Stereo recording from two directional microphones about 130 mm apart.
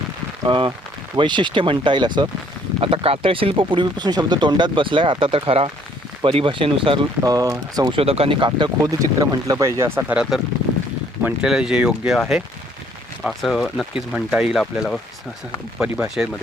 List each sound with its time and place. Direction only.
0.4 s speech: 40° right (ahead or behind)
2.8 s speech: 45° right (ahead or behind)
7.3 s speech: 30° right (ahead or behind)
8.0 s speech: 50° right (ahead or behind); by 10.2 s 20° right (ahead or behind)
10.2 s speech: centre (ahead or behind)
13.2 s speech: centre (ahead or behind)
15.8 s speech: 5° right (ahead or behind)